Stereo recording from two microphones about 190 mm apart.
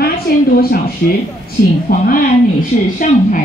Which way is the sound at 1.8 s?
50° left (ahead or behind).